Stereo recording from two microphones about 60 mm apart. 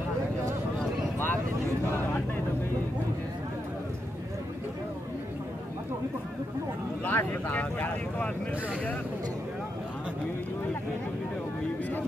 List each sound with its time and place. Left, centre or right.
1.1 s vehicle: left
1.9 s a sound: left
7.1 s speech: left